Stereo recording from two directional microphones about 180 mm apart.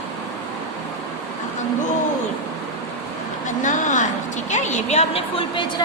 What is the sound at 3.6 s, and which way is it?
A woman's voice, 45° left (ahead or behind).